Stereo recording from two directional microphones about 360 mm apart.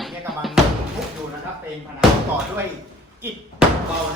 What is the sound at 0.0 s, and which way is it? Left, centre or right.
Music, centre.